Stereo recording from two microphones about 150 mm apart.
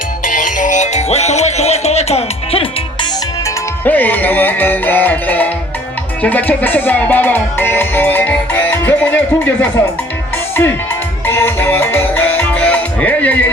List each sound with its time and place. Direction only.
0.3 s music: 60° left (ahead or behind); by 2.6 s 40° left (ahead or behind)
3.4 s music: 10° left (ahead or behind)